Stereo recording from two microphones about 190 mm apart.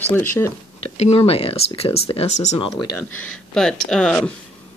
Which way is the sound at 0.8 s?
30° left (ahead or behind).